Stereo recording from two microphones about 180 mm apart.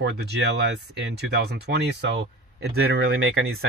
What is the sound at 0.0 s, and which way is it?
Speech, 70° right (ahead or behind).